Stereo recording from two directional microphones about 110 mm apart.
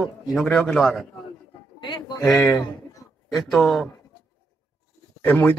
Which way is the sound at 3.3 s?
Centre (ahead or behind).